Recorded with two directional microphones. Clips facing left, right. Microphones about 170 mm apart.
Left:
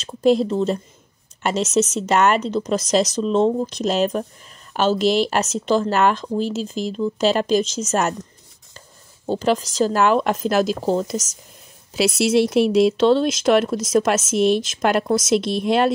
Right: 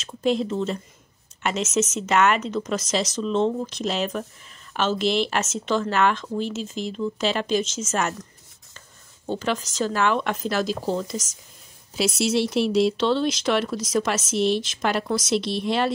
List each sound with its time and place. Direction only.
0.0 s speech: 35° left (ahead or behind)
11.9 s speech: 70° left (ahead or behind); by 15.9 s 50° left (ahead or behind)